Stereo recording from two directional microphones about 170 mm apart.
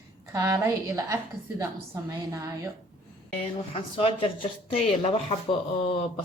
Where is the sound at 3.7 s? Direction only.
30° left (ahead or behind).